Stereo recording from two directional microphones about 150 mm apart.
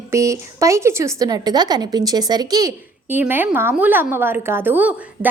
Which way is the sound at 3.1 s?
15° right (ahead or behind).